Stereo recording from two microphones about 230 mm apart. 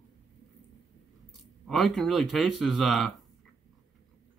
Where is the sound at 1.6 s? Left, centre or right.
Centre.